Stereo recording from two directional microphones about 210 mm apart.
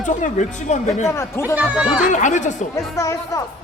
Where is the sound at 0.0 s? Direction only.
35° left (ahead or behind).